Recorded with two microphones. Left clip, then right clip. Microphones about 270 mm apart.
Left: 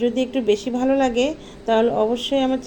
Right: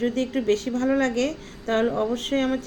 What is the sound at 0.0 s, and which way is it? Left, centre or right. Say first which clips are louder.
A woman's voice: left 4 dB; centre.